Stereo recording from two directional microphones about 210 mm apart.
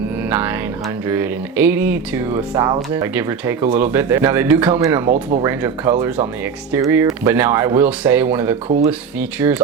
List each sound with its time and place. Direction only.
0.3 s speech: 10° right (ahead or behind)